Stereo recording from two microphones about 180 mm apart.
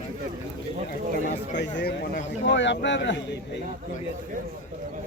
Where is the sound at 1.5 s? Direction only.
70° left (ahead or behind); by 3.2 s 90° left.